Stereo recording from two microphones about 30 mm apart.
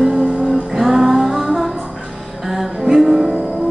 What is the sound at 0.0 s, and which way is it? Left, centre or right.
Music, centre.